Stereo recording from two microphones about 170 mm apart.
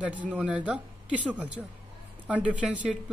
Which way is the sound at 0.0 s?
10° right (ahead or behind).